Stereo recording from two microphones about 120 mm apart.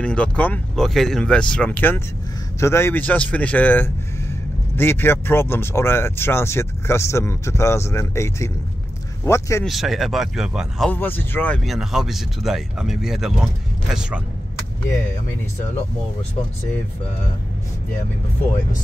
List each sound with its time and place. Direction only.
0.0 s speech: 10° left (ahead or behind)
9.7 s speech: centre (ahead or behind)
10.9 s speech: 15° left (ahead or behind)
11.6 s speech: centre (ahead or behind)